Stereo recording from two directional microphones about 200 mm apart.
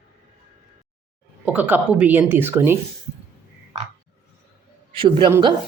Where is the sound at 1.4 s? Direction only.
10° right (ahead or behind).